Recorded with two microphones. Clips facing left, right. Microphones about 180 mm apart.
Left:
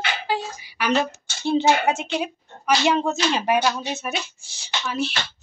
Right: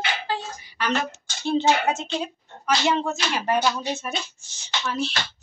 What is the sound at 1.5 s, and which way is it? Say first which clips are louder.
Speech: left 2 dB; 10° left (ahead or behind).